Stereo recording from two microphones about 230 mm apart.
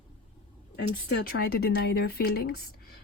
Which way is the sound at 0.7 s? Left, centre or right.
Left.